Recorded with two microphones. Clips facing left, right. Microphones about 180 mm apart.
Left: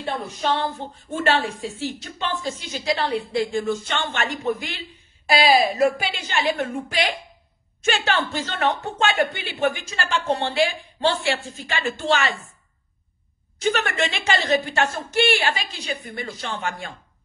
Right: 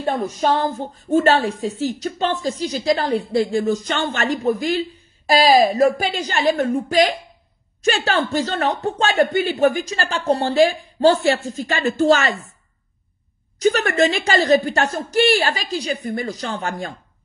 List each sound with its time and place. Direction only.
0.0 s a woman's voice: 40° right (ahead or behind)
13.6 s a woman's voice: 40° right (ahead or behind)